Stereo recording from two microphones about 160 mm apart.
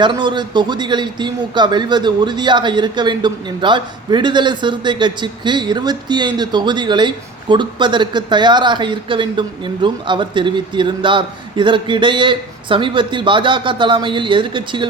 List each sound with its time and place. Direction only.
0.0 s a man's voice: 30° right (ahead or behind)